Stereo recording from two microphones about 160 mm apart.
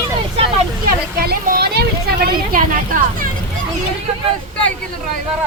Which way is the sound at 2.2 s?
60° right (ahead or behind).